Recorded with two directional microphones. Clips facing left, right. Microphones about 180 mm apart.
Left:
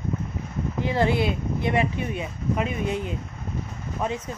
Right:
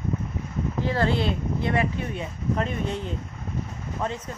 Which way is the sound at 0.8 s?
15° left (ahead or behind).